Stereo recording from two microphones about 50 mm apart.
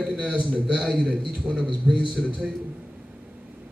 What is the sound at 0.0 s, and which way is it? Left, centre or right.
A man's voice, right.